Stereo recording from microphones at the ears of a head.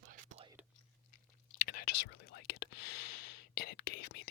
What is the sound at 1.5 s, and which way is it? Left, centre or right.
Whispering, left.